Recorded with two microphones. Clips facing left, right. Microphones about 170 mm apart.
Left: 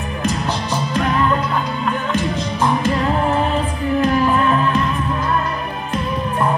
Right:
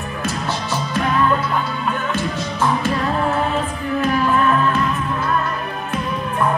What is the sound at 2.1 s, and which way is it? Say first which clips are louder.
Music: left 2 dB; 15° left (ahead or behind).